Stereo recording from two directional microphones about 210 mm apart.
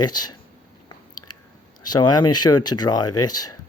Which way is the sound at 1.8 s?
20° left (ahead or behind).